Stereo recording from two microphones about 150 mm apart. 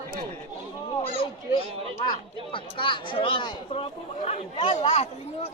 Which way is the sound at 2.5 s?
35° left (ahead or behind).